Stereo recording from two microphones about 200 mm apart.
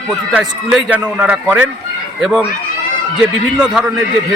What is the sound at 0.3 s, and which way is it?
A man's voice, 5° right (ahead or behind).